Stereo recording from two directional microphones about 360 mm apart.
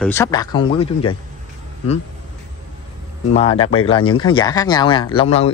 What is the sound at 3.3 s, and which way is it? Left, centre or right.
Speech, centre.